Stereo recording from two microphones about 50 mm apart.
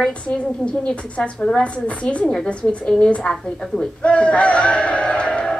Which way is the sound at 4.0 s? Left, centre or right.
Left.